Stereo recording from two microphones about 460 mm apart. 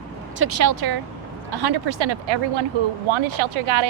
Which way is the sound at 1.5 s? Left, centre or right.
Right.